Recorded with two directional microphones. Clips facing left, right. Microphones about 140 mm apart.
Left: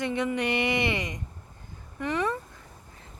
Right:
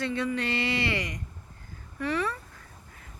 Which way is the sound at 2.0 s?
20° left (ahead or behind).